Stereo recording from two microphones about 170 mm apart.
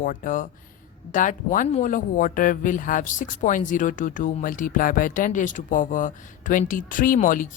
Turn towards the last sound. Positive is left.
turn(degrees=50)  # may be behind; listen again after turning